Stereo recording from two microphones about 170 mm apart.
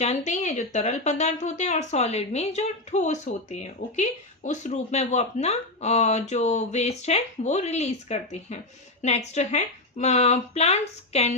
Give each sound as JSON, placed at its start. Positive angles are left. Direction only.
{"t": 0.0, "sound": "speech", "side_deg": 40}